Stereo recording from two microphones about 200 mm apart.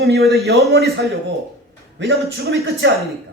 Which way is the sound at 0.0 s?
50° right (ahead or behind).